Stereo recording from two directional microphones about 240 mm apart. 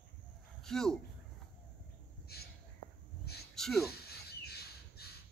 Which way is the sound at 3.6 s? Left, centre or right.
Centre.